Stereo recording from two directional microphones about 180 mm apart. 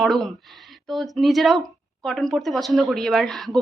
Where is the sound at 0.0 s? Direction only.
Centre (ahead or behind).